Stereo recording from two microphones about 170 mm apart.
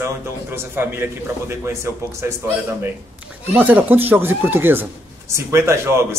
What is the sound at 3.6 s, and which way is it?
Speech, 10° right (ahead or behind).